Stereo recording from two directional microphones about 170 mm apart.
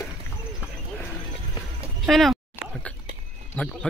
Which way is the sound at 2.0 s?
Centre (ahead or behind).